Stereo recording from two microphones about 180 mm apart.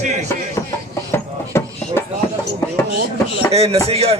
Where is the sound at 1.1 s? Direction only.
15° left (ahead or behind).